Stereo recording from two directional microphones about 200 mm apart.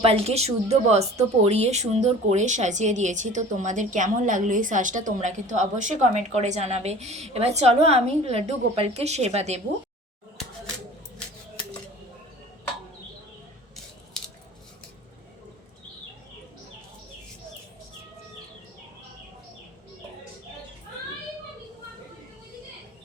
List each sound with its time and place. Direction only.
0.0 s speech: 30° right (ahead or behind)